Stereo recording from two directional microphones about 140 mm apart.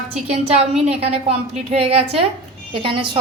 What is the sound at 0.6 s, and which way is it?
A woman's voice, 45° right (ahead or behind).